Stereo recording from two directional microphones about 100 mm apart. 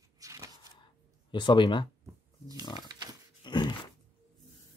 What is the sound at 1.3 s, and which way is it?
Speech, 50° left (ahead or behind).